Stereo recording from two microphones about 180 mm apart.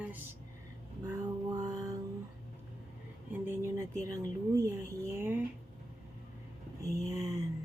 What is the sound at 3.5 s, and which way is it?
Speech, 15° right (ahead or behind).